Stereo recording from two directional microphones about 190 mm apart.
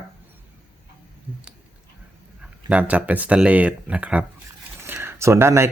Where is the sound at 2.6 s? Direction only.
5° right (ahead or behind).